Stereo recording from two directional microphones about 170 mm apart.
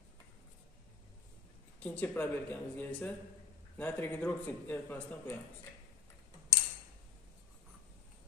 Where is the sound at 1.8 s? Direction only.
10° left (ahead or behind).